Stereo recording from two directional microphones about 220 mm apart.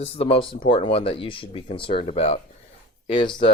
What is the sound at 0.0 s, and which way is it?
Speech, 25° left (ahead or behind).